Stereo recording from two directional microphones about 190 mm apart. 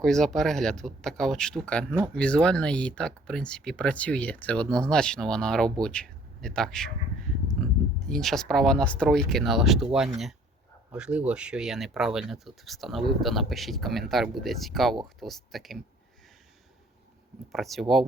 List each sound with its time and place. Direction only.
0.0 s speech: centre (ahead or behind)
10.9 s speech: 5° right (ahead or behind)
17.5 s speech: centre (ahead or behind)